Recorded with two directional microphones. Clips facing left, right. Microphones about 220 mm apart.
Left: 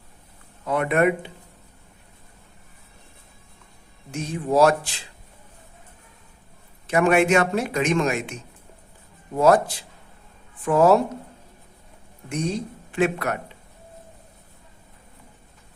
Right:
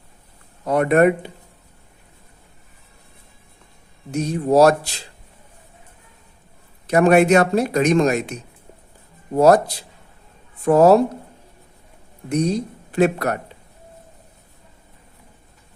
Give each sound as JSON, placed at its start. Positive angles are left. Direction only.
{"t": 0.6, "sound": "a man's voice", "side_deg": -40}
{"t": 4.1, "sound": "a man's voice", "side_deg": -40}
{"t": 6.8, "sound": "a man's voice", "side_deg": -40}
{"t": 12.3, "sound": "speech", "side_deg": -40}